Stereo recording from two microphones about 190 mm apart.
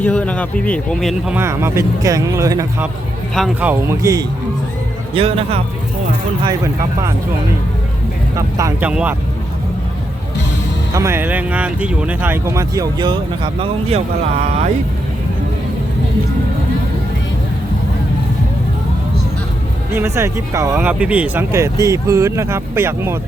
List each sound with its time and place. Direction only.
0.0 s speech: 5° left (ahead or behind)
1.4 s speech: 15° right (ahead or behind)
3.3 s speech: centre (ahead or behind)
3.7 s speech: 15° right (ahead or behind)
5.1 s a man's voice: 30° right (ahead or behind)
8.4 s speech: 15° right (ahead or behind)
8.9 s speech: 5° right (ahead or behind)
10.9 s speech: 15° right (ahead or behind); by 14.0 s 30° right (ahead or behind)
19.9 s speech: 15° right (ahead or behind)